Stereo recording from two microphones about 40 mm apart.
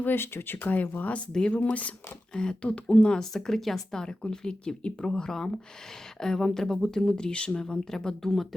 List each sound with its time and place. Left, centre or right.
0.0 s speech: left
2.3 s speech: centre
2.6 s speech: left
3.2 s speech: centre
7.8 s speech: centre